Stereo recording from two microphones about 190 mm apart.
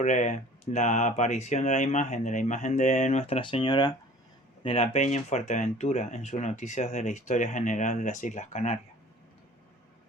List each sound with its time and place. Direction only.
0.0 s speech: 40° left (ahead or behind)